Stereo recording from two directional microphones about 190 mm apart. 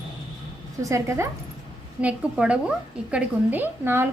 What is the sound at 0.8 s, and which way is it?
A woman's voice, 15° right (ahead or behind).